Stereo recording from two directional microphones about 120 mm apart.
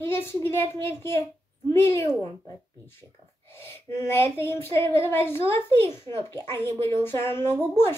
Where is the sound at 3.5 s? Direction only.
20° left (ahead or behind).